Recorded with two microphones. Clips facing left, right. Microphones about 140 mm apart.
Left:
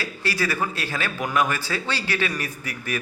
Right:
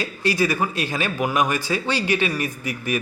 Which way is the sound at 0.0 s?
20° right (ahead or behind).